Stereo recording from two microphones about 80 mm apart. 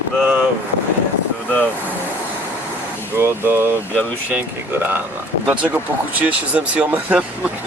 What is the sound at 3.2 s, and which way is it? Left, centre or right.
Speech, right.